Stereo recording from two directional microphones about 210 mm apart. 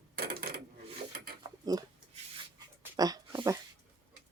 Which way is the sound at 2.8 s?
20° right (ahead or behind).